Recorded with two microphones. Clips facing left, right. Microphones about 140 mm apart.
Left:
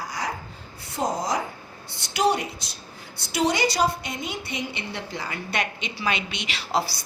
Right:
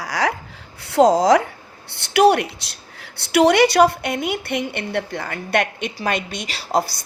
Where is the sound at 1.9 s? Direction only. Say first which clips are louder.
Right 8 dB; 65° right (ahead or behind).